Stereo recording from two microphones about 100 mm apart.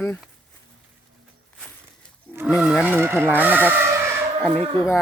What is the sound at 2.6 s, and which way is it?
Speech, centre (ahead or behind).